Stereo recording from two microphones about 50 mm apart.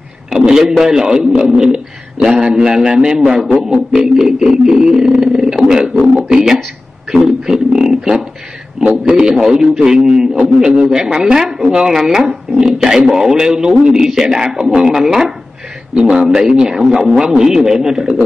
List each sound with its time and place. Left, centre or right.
0.3 s a man's voice: centre
7.1 s a sound: centre
8.8 s a man's voice: right
9.1 s a man's voice: centre